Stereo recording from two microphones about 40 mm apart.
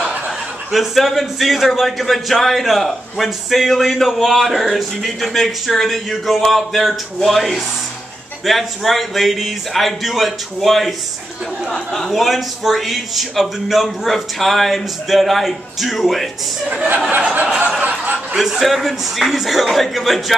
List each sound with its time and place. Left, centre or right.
0.7 s a man's voice: centre
11.7 s speech: centre
12.1 s a man's voice: centre
17.1 s a sound: right
18.4 s a man's voice: centre